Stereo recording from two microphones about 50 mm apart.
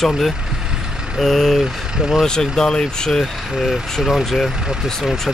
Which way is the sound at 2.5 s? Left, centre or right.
Centre.